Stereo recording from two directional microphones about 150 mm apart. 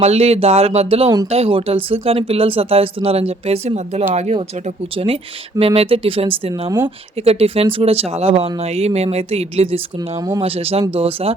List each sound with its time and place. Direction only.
0.0 s speech: 45° right (ahead or behind)
6.7 s speech: 15° right (ahead or behind)
7.2 s speech: 40° right (ahead or behind)
10.2 s speech: 25° right (ahead or behind)
10.4 s speech: 40° right (ahead or behind)